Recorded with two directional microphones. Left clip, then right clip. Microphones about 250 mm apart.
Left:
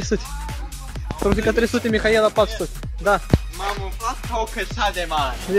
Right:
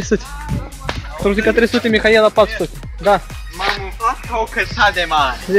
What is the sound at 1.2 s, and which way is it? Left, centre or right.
Speech, centre.